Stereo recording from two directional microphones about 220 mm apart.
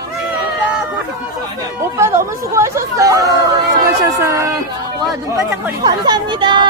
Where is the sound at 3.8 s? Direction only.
15° right (ahead or behind).